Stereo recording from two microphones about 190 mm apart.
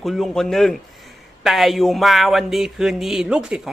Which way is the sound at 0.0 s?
Centre (ahead or behind).